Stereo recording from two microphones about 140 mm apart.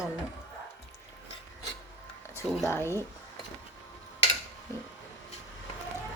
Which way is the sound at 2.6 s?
15° left (ahead or behind).